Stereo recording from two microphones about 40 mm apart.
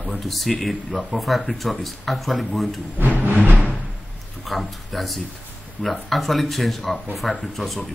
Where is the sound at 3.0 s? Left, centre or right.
Right.